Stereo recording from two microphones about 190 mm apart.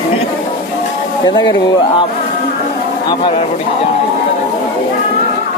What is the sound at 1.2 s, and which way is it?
Speech, 20° left (ahead or behind).